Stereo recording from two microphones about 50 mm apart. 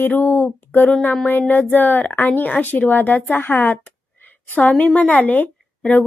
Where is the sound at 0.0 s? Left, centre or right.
Left.